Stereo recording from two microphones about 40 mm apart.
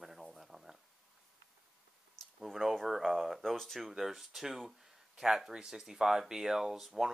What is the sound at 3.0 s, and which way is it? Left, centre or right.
Speech, centre.